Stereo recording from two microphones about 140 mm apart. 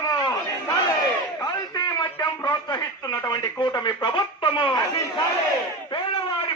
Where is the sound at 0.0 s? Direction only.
25° left (ahead or behind).